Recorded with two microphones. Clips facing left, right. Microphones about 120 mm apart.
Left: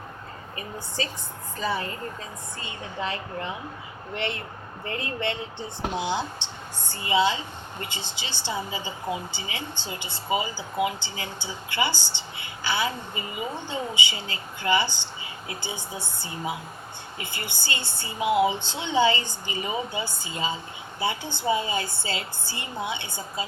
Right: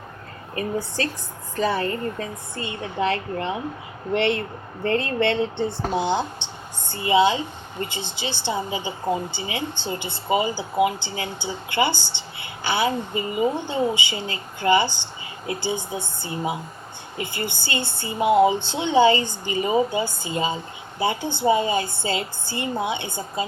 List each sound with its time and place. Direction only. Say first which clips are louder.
0.5 s speech: right 9 dB; 60° right (ahead or behind)
5.9 s a woman's voice: right 2 dB; 50° right (ahead or behind)